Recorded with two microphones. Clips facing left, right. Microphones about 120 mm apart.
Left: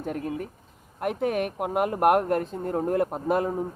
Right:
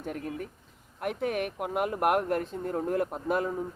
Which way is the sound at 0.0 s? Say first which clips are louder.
Left 5 dB; 45° left (ahead or behind).